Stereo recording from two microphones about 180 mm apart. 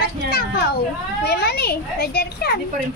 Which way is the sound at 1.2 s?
65° left (ahead or behind).